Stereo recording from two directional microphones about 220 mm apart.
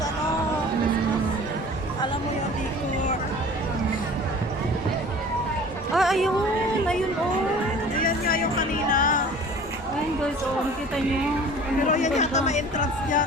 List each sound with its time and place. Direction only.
5.9 s a sound: centre (ahead or behind)
8.0 s music: 40° left (ahead or behind)
11.9 s speech: 30° left (ahead or behind)